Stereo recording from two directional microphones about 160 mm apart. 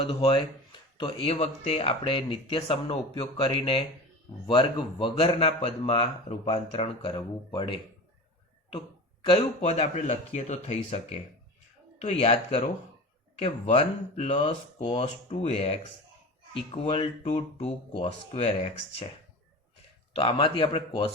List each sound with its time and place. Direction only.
0.0 s speech: 35° left (ahead or behind)
9.2 s speech: 40° left (ahead or behind)
16.8 s speech: 30° left (ahead or behind)
17.2 s speech: 45° left (ahead or behind)
20.1 s speech: 35° left (ahead or behind)